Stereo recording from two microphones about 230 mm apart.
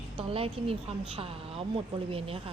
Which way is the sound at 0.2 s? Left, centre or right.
Right.